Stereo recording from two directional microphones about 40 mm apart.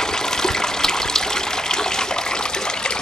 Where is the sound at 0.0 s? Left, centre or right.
Centre.